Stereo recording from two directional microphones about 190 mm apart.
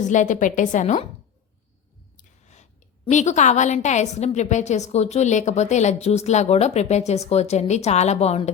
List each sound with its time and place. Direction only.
0.0 s a woman's voice: 40° left (ahead or behind)
2.1 s a woman's voice: 40° left (ahead or behind)